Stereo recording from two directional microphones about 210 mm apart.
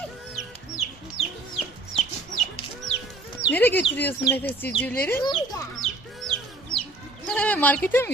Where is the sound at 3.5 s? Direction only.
10° left (ahead or behind).